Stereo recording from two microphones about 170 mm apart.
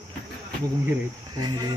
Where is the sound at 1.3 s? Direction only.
25° right (ahead or behind).